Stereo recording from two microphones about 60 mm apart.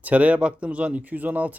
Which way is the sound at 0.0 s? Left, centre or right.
Right.